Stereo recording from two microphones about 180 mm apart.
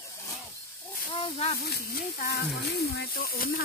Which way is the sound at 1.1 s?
30° left (ahead or behind).